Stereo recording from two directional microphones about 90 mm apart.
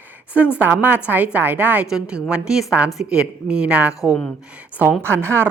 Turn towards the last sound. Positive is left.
turn(degrees=-30)  # may be behind; listen again after turning